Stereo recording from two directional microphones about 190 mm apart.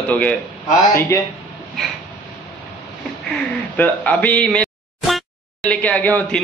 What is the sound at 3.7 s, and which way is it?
A man's voice, 10° left (ahead or behind).